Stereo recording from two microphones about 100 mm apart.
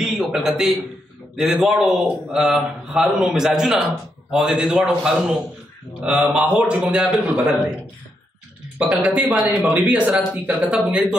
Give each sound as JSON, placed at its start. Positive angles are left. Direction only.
{"t": 0.0, "sound": "a sound", "side_deg": -5}
{"t": 1.3, "sound": "a man's voice", "side_deg": 0}
{"t": 8.7, "sound": "a man's voice", "side_deg": -10}